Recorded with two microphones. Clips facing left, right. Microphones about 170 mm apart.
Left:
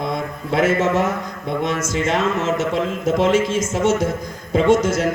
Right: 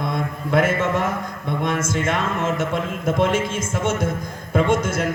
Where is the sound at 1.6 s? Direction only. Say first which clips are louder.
Left 1 dB; 55° right (ahead or behind).